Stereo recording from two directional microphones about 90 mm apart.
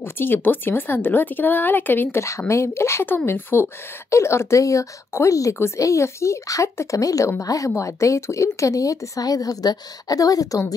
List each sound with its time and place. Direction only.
0.0 s speech: 25° left (ahead or behind)
2.2 s speech: 35° left (ahead or behind)